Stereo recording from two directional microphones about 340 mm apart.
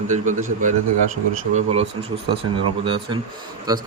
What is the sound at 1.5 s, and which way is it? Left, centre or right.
Speech, centre.